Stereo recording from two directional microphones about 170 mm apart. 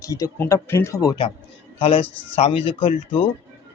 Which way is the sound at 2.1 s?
10° left (ahead or behind).